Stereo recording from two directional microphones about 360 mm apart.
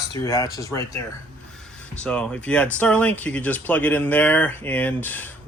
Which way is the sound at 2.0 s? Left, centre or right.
Centre.